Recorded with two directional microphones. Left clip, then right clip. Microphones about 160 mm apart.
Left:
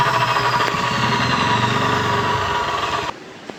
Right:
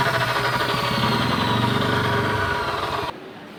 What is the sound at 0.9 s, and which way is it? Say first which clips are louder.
Vehicle: left 3 dB; 15° right (ahead or behind).